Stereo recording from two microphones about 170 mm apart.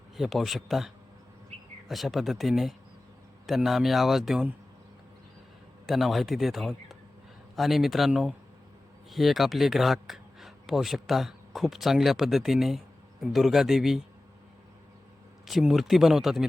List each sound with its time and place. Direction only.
0.2 s a man's voice: centre (ahead or behind)
5.8 s a man's voice: centre (ahead or behind)
15.4 s a man's voice: centre (ahead or behind)